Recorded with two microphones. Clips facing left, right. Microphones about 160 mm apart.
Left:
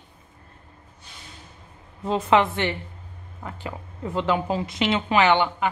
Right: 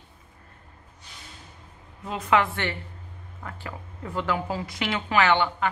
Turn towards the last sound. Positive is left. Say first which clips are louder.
# left 2 dB
turn(degrees=15)  # may be behind; listen again after turning